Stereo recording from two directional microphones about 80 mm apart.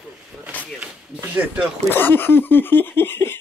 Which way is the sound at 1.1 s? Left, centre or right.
Centre.